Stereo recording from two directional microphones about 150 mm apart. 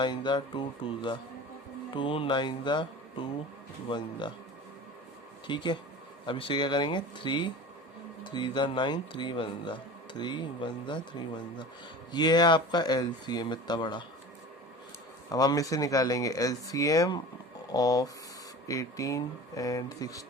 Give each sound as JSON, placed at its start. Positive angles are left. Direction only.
{"t": 0.0, "sound": "speech", "side_deg": 30}
{"t": 5.5, "sound": "speech", "side_deg": 30}
{"t": 15.3, "sound": "speech", "side_deg": 25}